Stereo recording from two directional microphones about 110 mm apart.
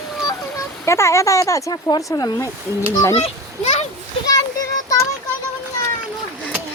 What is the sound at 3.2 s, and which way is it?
Speech, 85° left.